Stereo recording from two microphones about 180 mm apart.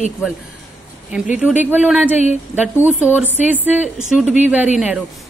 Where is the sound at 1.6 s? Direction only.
10° right (ahead or behind).